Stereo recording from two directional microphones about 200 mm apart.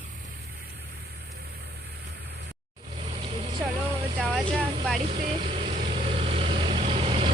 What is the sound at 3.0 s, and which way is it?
Vehicle, 30° right (ahead or behind).